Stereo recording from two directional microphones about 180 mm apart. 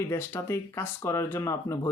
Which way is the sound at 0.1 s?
15° left (ahead or behind).